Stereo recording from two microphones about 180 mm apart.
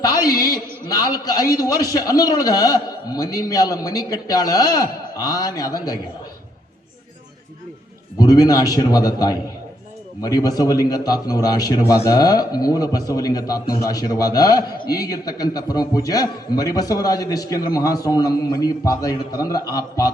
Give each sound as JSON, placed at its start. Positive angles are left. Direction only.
{"t": 0.9, "sound": "a man's voice", "side_deg": 20}
{"t": 8.2, "sound": "a man's voice", "side_deg": 20}